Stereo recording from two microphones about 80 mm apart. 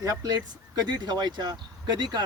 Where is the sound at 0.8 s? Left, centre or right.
Right.